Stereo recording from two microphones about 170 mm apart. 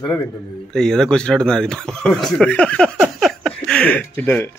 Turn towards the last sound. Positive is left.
turn(degrees=10)  # may be behind; listen again after turning